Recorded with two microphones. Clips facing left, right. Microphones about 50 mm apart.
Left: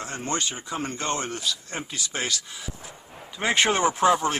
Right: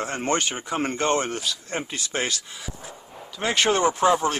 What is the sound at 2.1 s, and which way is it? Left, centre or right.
Speech, right.